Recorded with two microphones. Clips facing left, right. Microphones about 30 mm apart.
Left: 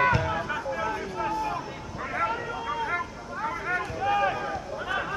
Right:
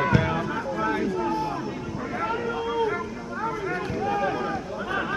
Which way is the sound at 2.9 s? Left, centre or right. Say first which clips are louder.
Right 2 dB; centre.